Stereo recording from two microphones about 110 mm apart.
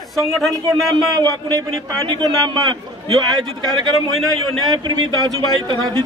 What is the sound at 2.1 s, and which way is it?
Speech, 40° right (ahead or behind).